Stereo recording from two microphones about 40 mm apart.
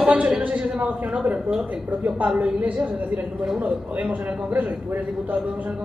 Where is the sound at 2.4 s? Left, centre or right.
Right.